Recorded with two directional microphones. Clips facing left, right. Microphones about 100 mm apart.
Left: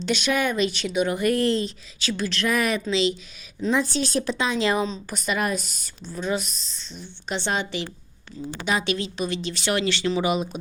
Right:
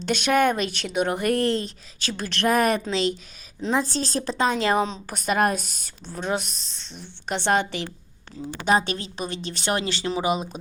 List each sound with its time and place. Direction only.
0.0 s speech: 50° right (ahead or behind)
3.7 s speech: 40° right (ahead or behind)
8.6 s speech: 40° right (ahead or behind)
9.8 s speech: 35° right (ahead or behind)